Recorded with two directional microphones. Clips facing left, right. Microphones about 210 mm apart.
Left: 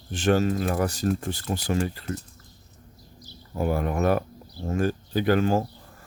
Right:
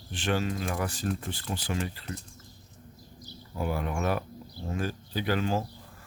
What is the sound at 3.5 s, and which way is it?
Speech, 45° left (ahead or behind).